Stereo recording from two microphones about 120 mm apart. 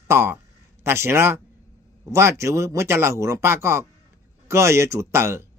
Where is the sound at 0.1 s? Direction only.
20° right (ahead or behind).